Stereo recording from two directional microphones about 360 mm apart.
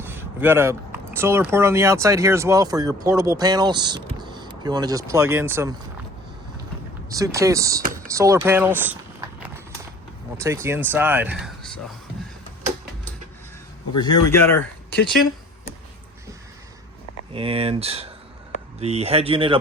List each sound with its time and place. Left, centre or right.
0.0 s speech: centre
7.1 s speech: centre
10.3 s speech: centre
14.3 s speech: centre
17.3 s speech: centre